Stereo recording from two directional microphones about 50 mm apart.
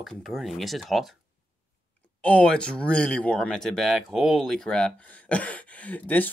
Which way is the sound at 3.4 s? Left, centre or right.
Centre.